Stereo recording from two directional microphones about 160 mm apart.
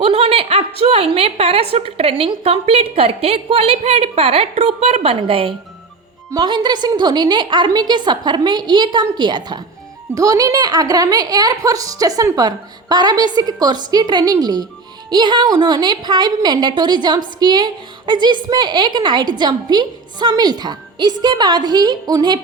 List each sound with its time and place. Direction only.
0.0 s a woman's voice: 35° right (ahead or behind)